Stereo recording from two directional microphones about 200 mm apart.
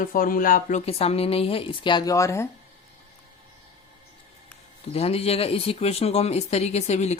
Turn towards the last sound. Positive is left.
turn(degrees=35)  # may be behind; listen again after turning